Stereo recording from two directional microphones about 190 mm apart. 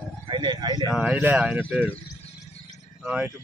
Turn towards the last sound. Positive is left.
turn(degrees=-5)  # may be behind; listen again after turning